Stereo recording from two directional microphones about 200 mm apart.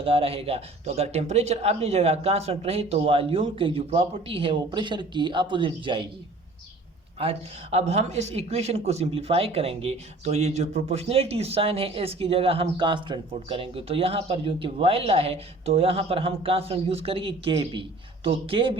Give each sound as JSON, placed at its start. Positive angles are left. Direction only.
{"t": 0.0, "sound": "speech", "side_deg": -30}
{"t": 7.2, "sound": "speech", "side_deg": -30}